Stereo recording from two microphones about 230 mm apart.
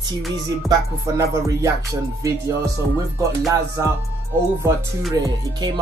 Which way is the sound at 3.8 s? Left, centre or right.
Centre.